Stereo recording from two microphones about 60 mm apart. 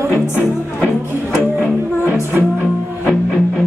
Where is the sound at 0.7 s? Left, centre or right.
Centre.